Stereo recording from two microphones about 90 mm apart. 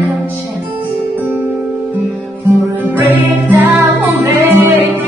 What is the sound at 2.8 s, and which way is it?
Music, 20° right (ahead or behind).